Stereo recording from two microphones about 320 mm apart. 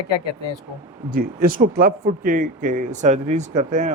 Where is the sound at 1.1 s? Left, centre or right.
Right.